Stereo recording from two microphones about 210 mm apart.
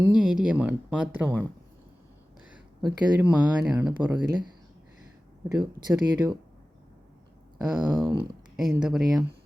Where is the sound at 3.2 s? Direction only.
10° right (ahead or behind).